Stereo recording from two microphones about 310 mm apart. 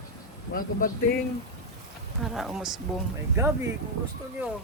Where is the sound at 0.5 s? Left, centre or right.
Left.